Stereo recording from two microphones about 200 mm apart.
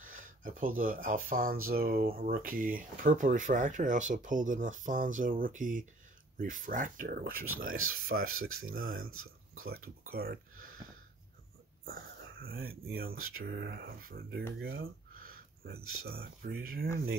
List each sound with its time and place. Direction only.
0.0 s speech: 40° right (ahead or behind)
7.7 s speech: 90° right
8.5 s speech: 45° right (ahead or behind)
12.4 s speech: 50° right (ahead or behind)
13.2 s speech: 90° right
13.5 s speech: 55° right (ahead or behind)
14.8 s a sound: 45° right (ahead or behind)
15.8 s speech: 90° right
16.1 s speech: 50° right (ahead or behind)